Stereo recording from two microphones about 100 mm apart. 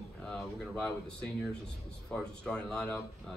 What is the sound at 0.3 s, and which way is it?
A man's voice, 10° left (ahead or behind).